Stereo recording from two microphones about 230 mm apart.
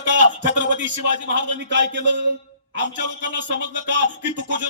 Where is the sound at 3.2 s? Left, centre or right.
Right.